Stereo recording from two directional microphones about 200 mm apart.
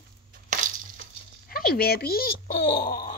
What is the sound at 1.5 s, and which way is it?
Speech, 50° left (ahead or behind).